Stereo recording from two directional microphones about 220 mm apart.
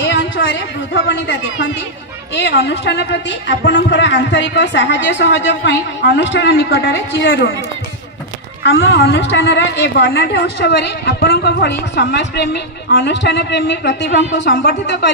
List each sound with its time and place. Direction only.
0.0 s a sound: 55° left (ahead or behind)
2.3 s a woman's voice: 55° left (ahead or behind)
8.6 s a woman's voice: 50° left (ahead or behind)